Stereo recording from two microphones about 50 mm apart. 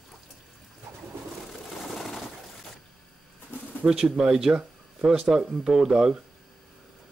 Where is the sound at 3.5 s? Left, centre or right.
Left.